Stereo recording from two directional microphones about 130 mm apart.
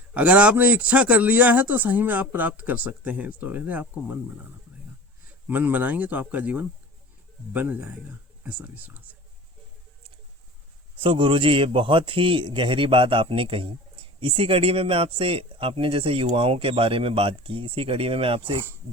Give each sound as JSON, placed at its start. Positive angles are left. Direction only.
{"t": 0.1, "sound": "a man's voice", "side_deg": -10}
{"t": 5.5, "sound": "a man's voice", "side_deg": -15}
{"t": 10.9, "sound": "a man's voice", "side_deg": -40}